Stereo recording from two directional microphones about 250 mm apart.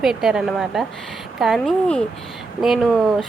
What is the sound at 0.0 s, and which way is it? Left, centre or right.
Speech, centre.